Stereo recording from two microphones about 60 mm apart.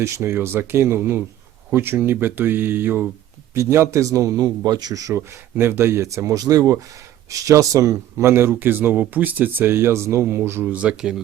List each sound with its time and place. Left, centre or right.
0.0 s speech: right
3.5 s a man's voice: right
5.5 s speech: right
7.3 s speech: right
8.3 s speech: right
10.7 s speech: right